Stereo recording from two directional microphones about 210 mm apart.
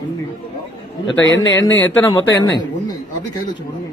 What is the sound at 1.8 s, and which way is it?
Speech, 10° left (ahead or behind).